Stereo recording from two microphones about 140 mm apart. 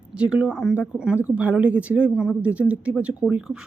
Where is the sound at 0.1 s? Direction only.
10° right (ahead or behind).